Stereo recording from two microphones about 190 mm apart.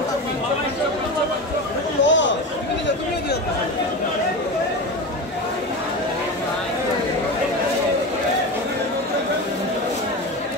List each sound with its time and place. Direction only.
2.0 s chatter: 75° left (ahead or behind)